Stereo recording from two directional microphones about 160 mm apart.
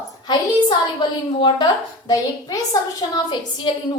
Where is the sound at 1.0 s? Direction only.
30° left (ahead or behind).